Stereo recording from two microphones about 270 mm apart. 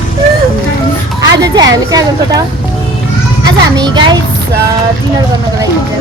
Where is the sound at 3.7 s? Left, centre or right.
Centre.